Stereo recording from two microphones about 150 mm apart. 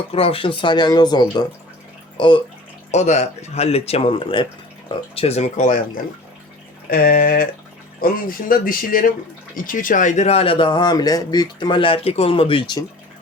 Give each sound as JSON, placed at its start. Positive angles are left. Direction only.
{"t": 0.1, "sound": "speech", "side_deg": 40}
{"t": 2.9, "sound": "speech", "side_deg": 50}
{"t": 6.9, "sound": "speech", "side_deg": 75}